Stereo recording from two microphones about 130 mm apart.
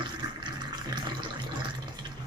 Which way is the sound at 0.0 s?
35° right (ahead or behind).